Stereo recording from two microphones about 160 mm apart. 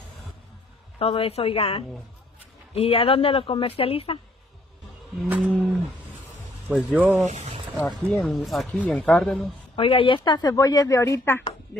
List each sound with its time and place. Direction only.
0.9 s speech: 35° left (ahead or behind)
5.4 s speech: centre (ahead or behind)
6.9 s speech: 10° right (ahead or behind)
7.2 s speech: 45° right (ahead or behind)
7.8 s speech: centre (ahead or behind)
9.8 s speech: 35° left (ahead or behind); by 11.4 s 15° left (ahead or behind)